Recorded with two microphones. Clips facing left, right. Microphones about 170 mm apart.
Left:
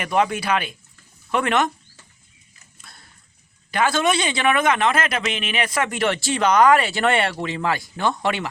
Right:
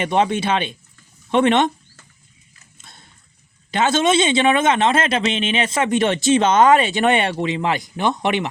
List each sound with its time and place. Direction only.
0.0 s speech: 25° right (ahead or behind)
2.7 s dog: 20° right (ahead or behind)
3.7 s speech: 25° right (ahead or behind)